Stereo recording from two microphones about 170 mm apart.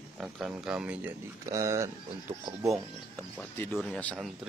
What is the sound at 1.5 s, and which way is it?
Speech, 20° right (ahead or behind).